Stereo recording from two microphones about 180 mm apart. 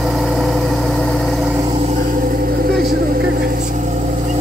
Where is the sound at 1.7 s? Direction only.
40° right (ahead or behind).